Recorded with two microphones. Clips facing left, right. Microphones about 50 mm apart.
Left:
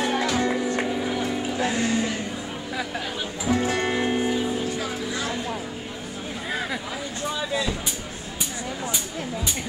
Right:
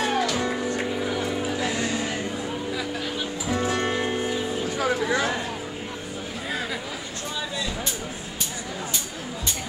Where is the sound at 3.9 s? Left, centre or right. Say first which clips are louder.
Left 2 dB; centre.